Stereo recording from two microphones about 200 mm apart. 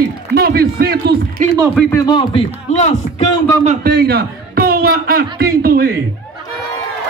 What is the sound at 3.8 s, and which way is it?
A man's voice, 55° right (ahead or behind).